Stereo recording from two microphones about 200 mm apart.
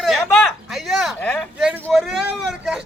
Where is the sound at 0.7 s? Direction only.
Centre (ahead or behind).